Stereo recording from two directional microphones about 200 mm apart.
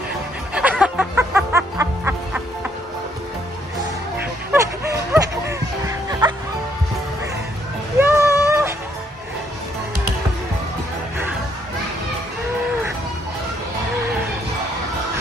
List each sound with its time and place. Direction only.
0.6 s music: 5° right (ahead or behind)
4.5 s music: 15° right (ahead or behind)
8.0 s a sound: 15° right (ahead or behind)